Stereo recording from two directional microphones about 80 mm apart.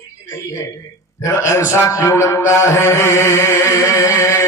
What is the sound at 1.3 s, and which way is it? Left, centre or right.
A man's voice, left.